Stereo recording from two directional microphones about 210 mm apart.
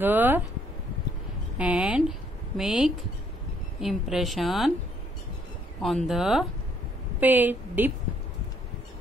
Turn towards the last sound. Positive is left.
turn(degrees=-10)  # may be behind; listen again after turning